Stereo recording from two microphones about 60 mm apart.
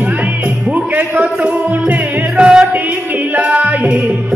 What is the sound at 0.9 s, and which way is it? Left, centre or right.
Speech, right.